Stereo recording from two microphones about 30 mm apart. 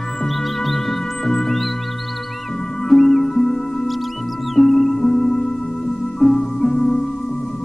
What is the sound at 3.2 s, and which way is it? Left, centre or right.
Music, centre.